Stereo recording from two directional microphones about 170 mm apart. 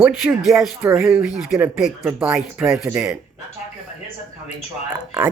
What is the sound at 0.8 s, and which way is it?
Speech, 15° right (ahead or behind).